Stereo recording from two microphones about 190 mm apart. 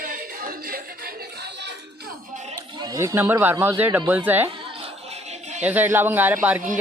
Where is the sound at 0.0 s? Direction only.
50° right (ahead or behind).